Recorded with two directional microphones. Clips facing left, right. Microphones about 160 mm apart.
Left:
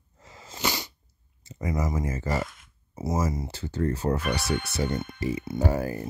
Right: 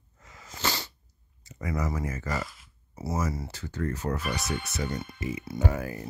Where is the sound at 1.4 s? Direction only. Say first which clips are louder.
Left 2 dB; 25° left (ahead or behind).